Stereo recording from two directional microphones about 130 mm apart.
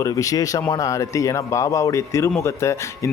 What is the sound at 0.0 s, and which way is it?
Speech, 25° left (ahead or behind).